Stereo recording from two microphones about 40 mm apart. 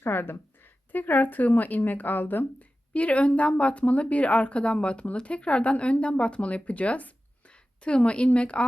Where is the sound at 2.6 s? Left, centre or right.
Left.